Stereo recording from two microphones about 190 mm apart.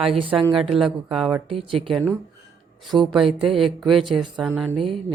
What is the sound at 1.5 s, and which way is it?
Speech, 30° right (ahead or behind).